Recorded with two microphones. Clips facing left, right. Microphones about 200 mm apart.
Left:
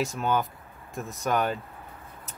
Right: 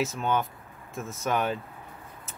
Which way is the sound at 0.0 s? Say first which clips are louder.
Left 1 dB; centre (ahead or behind).